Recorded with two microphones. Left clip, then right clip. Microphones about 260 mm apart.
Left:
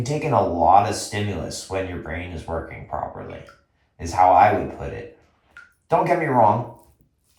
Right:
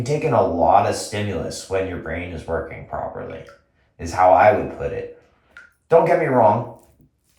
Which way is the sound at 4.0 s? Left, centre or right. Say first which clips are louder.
Right 1 dB; left.